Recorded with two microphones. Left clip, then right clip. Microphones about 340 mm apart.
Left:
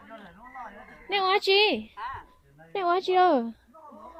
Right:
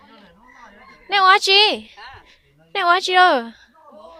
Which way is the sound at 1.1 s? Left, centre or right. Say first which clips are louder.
Right 11 dB; centre.